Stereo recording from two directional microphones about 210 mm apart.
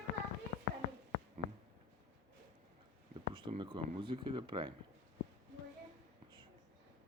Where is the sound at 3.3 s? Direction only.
25° right (ahead or behind).